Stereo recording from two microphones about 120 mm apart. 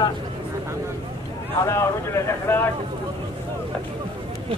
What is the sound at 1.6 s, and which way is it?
Speech, 25° left (ahead or behind).